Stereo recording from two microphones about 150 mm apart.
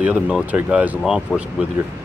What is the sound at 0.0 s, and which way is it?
Speech, 10° right (ahead or behind).